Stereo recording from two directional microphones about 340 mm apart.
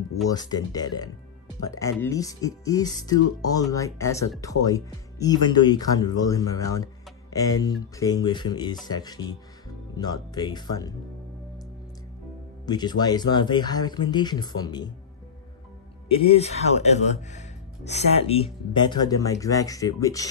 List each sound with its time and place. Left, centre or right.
0.3 s speech: centre
12.6 s speech: centre
16.1 s speech: centre